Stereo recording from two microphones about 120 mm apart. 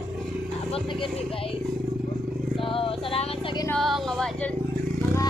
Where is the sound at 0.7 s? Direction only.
50° left (ahead or behind).